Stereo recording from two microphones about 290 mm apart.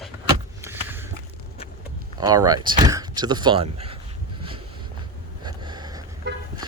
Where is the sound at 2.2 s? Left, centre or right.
Centre.